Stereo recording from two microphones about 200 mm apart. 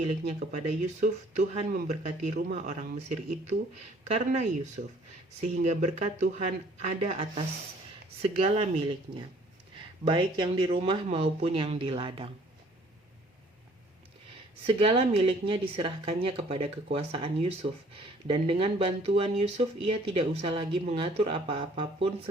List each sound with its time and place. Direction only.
0.1 s speech: 40° right (ahead or behind)
4.8 s speech: 50° right (ahead or behind)
5.4 s speech: 35° right (ahead or behind)
14.7 s speech: 25° right (ahead or behind)